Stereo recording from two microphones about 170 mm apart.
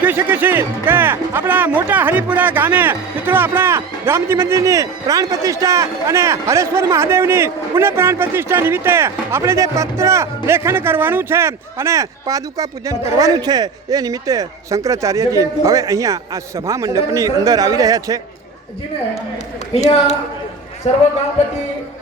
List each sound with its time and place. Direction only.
0.0 s speech: 10° right (ahead or behind)
20.9 s a man's voice: 40° left (ahead or behind)